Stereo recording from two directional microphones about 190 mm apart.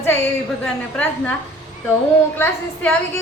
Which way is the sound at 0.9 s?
10° left (ahead or behind).